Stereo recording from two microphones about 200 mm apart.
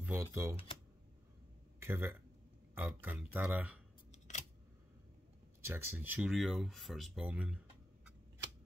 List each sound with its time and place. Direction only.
0.0 s speech: 10° right (ahead or behind)
1.8 s speech: 10° right (ahead or behind)
4.1 s camera: 35° left (ahead or behind)
5.6 s speech: 10° right (ahead or behind)